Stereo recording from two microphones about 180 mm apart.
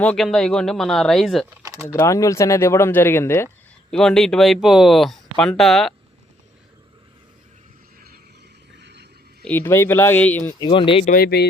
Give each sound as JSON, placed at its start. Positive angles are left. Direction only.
{"t": 0.0, "sound": "speech", "side_deg": 5}
{"t": 1.6, "sound": "typing", "side_deg": -20}
{"t": 1.9, "sound": "speech", "side_deg": 15}
{"t": 3.9, "sound": "speech", "side_deg": 5}
{"t": 8.8, "sound": "a sound", "side_deg": -70}
{"t": 9.4, "sound": "speech", "side_deg": 10}
{"t": 10.6, "sound": "speech", "side_deg": 30}
{"t": 11.0, "sound": "speech", "side_deg": 55}